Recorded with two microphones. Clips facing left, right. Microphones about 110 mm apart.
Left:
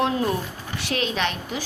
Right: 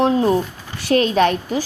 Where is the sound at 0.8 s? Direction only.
40° right (ahead or behind).